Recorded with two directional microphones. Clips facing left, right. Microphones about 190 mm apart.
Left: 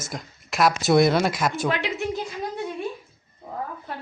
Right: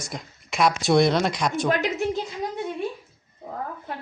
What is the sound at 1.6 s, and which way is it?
Speech, 45° right (ahead or behind).